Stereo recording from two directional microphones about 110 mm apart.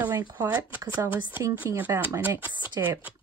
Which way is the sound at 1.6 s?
30° right (ahead or behind).